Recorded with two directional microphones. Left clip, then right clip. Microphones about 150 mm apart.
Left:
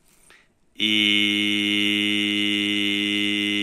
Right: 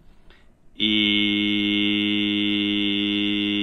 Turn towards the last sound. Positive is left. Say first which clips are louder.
# left 1 dB
turn(degrees=20)  # may be behind; listen again after turning